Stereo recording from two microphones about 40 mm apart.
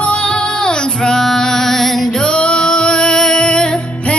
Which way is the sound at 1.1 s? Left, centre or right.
Centre.